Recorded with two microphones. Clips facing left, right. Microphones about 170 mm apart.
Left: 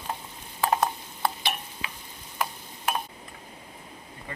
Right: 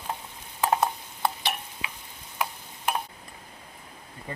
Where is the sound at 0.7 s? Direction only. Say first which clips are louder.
Right 1 dB; 5° right (ahead or behind).